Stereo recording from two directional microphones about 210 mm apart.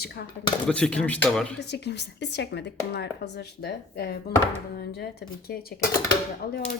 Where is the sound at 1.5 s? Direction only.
55° left (ahead or behind).